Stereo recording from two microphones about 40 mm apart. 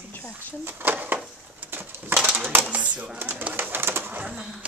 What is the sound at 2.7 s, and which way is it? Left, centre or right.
Speech, right.